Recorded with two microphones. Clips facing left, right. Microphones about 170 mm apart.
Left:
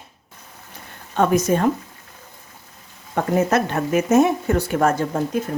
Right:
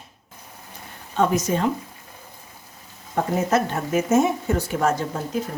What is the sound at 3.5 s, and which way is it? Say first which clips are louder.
Speech: left 2 dB; 65° left (ahead or behind).